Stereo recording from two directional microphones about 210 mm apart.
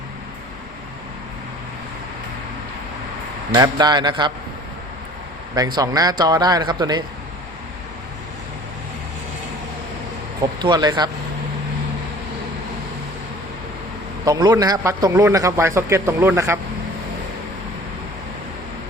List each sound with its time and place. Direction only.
3.5 s a man's voice: 20° right (ahead or behind)
5.5 s a man's voice: 20° right (ahead or behind)
10.6 s a man's voice: 20° right (ahead or behind)
14.3 s a man's voice: 20° right (ahead or behind)